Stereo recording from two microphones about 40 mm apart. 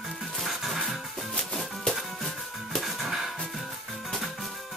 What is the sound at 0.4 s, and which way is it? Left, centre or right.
Music, centre.